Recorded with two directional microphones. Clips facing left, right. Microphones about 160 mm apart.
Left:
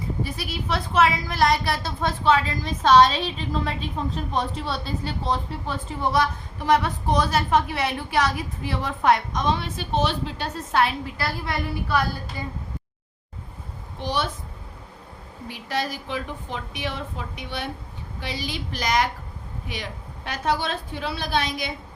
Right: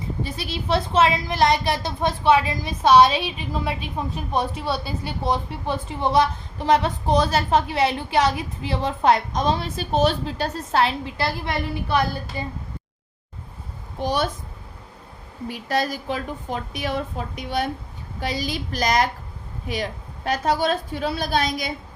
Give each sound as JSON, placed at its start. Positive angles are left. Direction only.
{"t": 0.2, "sound": "a woman's voice", "side_deg": -25}
{"t": 14.0, "sound": "a woman's voice", "side_deg": -45}
{"t": 15.4, "sound": "a woman's voice", "side_deg": -45}